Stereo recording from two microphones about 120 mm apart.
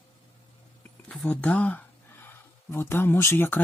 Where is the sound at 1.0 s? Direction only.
10° left (ahead or behind).